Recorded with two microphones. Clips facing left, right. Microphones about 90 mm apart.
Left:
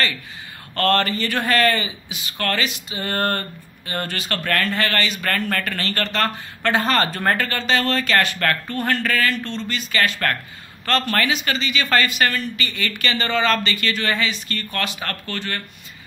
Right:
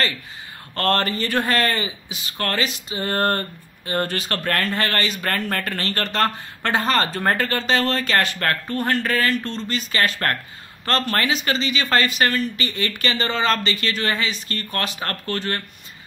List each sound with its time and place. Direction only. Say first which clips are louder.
0.7 s speech: left 2 dB; 25° right (ahead or behind)
7.4 s speech: even; 30° right (ahead or behind)
9.2 s speech: even; 35° right (ahead or behind)